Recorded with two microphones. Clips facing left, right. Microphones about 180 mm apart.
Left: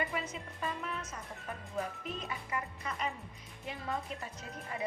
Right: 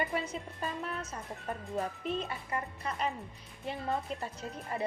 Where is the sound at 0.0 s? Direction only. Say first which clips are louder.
Right 3 dB; 30° right (ahead or behind).